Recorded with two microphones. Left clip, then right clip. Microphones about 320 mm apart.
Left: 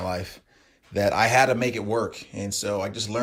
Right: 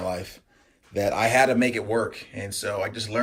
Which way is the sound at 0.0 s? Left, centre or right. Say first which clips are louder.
Even; left.